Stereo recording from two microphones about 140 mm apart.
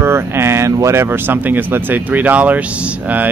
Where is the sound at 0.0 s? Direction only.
20° right (ahead or behind).